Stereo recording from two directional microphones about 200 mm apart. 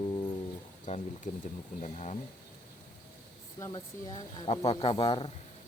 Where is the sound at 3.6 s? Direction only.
20° left (ahead or behind).